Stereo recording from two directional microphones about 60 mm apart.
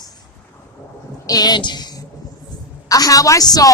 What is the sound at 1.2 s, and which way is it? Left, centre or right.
Speech, left.